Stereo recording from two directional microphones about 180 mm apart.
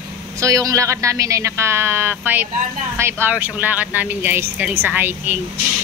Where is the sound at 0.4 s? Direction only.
20° right (ahead or behind).